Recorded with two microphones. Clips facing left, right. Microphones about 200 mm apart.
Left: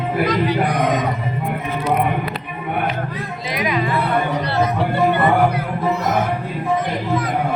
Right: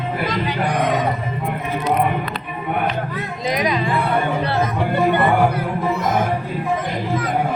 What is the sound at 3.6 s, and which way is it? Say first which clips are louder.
Speech: left 1 dB; 35° right (ahead or behind).